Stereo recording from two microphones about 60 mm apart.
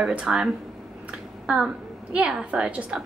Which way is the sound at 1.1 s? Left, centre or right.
Centre.